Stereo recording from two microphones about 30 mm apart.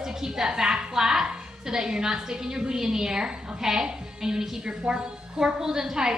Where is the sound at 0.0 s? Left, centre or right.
Centre.